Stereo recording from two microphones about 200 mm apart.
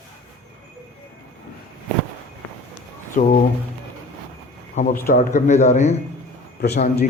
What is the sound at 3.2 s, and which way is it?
Speech, 35° left (ahead or behind).